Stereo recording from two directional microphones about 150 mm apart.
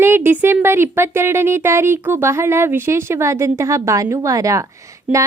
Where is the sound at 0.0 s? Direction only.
15° right (ahead or behind).